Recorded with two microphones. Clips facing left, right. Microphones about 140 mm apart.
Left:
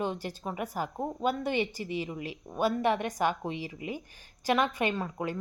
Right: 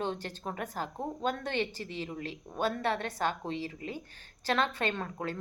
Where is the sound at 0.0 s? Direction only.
10° left (ahead or behind).